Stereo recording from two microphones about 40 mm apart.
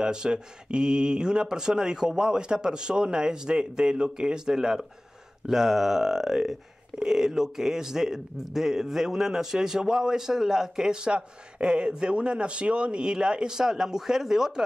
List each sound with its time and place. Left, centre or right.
0.0 s speech: centre